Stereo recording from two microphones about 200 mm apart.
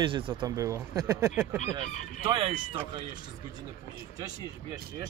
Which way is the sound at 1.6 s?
35° left (ahead or behind).